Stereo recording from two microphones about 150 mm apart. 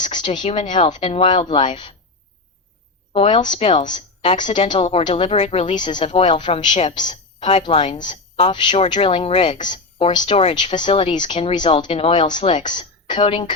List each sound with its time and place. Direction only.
0.0 s a sound: 30° left (ahead or behind)
0.3 s a woman's voice: 35° left (ahead or behind)
3.1 s a woman's voice: 35° left (ahead or behind)
6.7 s a woman's voice: 55° left (ahead or behind)
7.1 s a woman's voice: 35° left (ahead or behind)
9.6 s a woman's voice: 30° left (ahead or behind)